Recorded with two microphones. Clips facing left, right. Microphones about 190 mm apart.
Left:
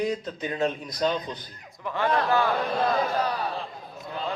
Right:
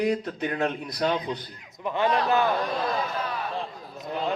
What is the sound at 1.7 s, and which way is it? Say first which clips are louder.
Speech: right 1 dB; 20° right (ahead or behind).